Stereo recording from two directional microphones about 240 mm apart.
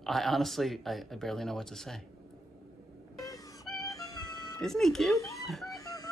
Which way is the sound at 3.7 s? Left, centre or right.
Centre.